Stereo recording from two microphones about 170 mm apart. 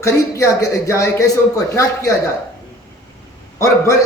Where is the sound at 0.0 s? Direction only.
20° left (ahead or behind).